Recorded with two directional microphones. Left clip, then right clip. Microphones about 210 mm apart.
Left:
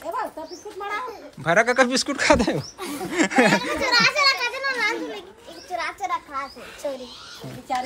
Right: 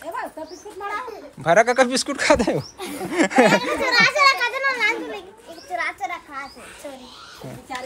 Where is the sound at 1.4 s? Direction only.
10° left (ahead or behind).